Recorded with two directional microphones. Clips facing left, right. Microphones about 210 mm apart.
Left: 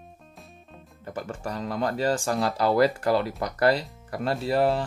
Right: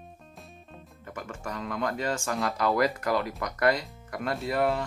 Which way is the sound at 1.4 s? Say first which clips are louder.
Left 3 dB; 35° left (ahead or behind).